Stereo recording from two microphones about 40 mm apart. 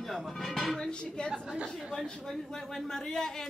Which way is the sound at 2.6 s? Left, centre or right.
Centre.